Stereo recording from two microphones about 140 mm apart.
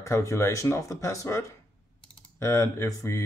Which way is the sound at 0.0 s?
20° left (ahead or behind).